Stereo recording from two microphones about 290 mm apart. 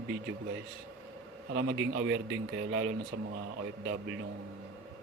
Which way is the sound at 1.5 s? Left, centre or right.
Right.